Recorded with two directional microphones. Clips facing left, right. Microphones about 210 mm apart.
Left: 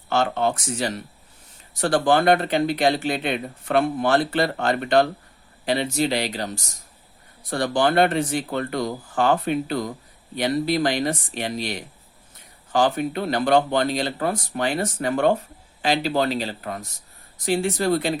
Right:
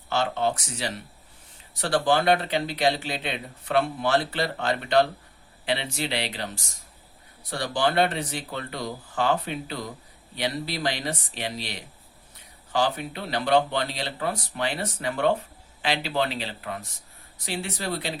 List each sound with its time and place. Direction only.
0.1 s speech: 50° left (ahead or behind)